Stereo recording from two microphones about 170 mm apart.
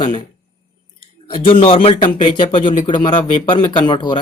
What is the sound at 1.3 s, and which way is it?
Speech, 30° left (ahead or behind).